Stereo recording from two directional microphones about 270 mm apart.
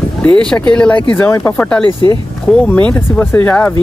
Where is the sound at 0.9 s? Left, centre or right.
Centre.